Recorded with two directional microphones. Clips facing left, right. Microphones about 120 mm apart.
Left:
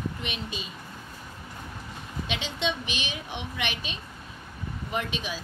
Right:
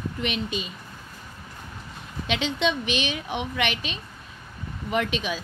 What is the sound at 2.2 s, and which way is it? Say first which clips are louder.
A woman's voice: right 6 dB; 65° right (ahead or behind).